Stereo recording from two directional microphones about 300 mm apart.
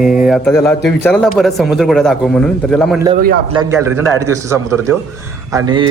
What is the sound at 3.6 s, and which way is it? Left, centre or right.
A man's voice, centre.